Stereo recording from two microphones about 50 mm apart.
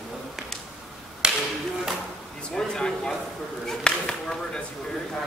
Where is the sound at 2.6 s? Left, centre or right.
Centre.